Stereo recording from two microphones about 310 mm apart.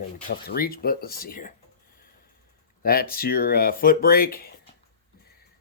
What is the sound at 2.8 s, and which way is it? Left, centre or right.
Speech, left.